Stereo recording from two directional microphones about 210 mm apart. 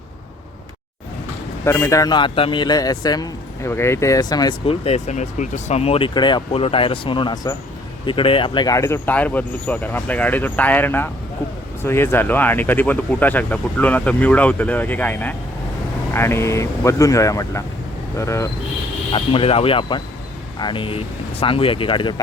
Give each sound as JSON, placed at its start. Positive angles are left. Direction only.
{"t": 1.6, "sound": "a man's voice", "side_deg": 15}
{"t": 19.1, "sound": "a man's voice", "side_deg": 25}